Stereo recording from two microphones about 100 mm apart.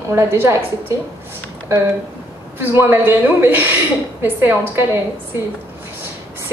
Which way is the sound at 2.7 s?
20° right (ahead or behind).